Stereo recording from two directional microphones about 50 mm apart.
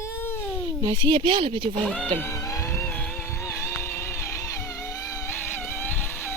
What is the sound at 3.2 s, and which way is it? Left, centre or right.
Music, left.